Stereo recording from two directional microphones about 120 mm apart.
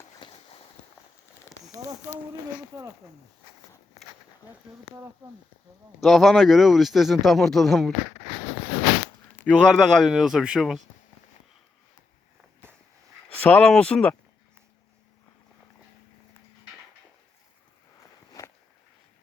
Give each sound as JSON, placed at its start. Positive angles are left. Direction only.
{"t": 0.2, "sound": "walk", "side_deg": 40}
{"t": 1.6, "sound": "a sound", "side_deg": -30}
{"t": 2.7, "sound": "speech", "side_deg": -25}
{"t": 6.0, "sound": "speech", "side_deg": 0}
{"t": 9.5, "sound": "speech", "side_deg": 10}
{"t": 10.1, "sound": "speech", "side_deg": -5}
{"t": 13.4, "sound": "speech", "side_deg": 10}
{"t": 18.4, "sound": "a sound", "side_deg": 25}